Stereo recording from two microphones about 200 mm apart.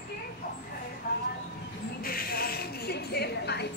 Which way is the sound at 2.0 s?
50° left (ahead or behind).